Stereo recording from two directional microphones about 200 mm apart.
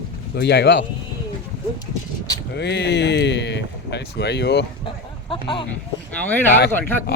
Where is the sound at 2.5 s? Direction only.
55° left (ahead or behind).